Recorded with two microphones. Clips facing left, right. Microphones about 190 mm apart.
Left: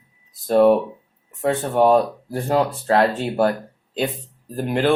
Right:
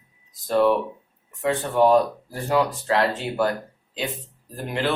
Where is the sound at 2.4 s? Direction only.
45° left (ahead or behind).